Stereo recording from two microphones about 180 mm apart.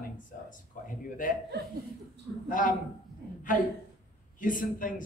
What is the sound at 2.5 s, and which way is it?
Speech, 50° left (ahead or behind).